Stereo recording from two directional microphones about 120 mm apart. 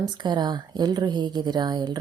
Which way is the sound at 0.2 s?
35° right (ahead or behind).